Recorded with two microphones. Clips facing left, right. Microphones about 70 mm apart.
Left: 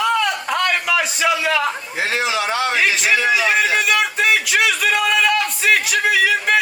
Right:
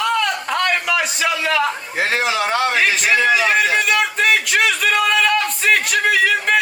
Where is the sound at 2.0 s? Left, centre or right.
Right.